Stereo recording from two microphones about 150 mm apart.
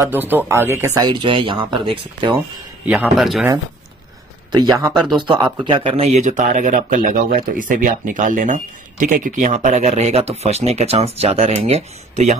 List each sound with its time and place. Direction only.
0.0 s speech: 15° right (ahead or behind)
1.0 s speech: 30° right (ahead or behind)
2.9 s speech: centre (ahead or behind)
4.7 s speech: 20° right (ahead or behind); by 12.4 s 45° right (ahead or behind)